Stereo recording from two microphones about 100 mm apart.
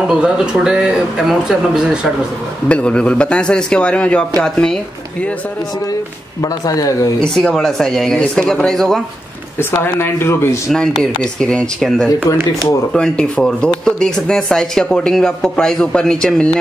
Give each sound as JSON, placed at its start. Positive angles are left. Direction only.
{"t": 0.1, "sound": "speech", "side_deg": -10}
{"t": 2.7, "sound": "speech", "side_deg": 10}
{"t": 6.4, "sound": "speech", "side_deg": 35}
{"t": 7.2, "sound": "speech", "side_deg": 5}
{"t": 9.6, "sound": "speech", "side_deg": 20}
{"t": 10.7, "sound": "speech", "side_deg": 5}